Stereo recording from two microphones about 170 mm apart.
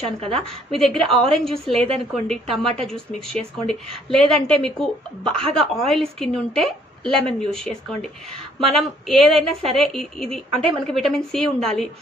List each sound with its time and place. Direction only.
0.0 s a woman's voice: 35° right (ahead or behind)
0.7 s a woman's voice: centre (ahead or behind)